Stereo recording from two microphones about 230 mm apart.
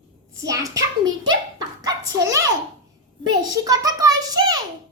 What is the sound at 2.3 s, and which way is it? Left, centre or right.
A child's voice, centre.